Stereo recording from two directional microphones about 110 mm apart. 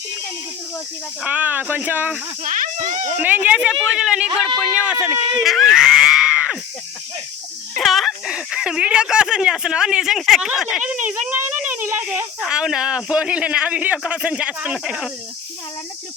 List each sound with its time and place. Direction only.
1.2 s speech: 15° right (ahead or behind)
3.2 s speech: 15° right (ahead or behind)
5.4 s screaming: centre (ahead or behind)
7.8 s speech: centre (ahead or behind)